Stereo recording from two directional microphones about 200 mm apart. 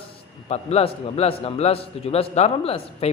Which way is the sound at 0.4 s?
30° left (ahead or behind).